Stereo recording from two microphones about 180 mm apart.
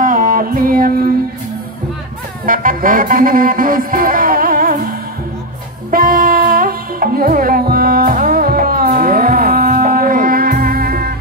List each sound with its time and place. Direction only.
0.0 s music: 50° right (ahead or behind)
2.4 s music: 50° right (ahead or behind)
5.9 s music: 50° right (ahead or behind)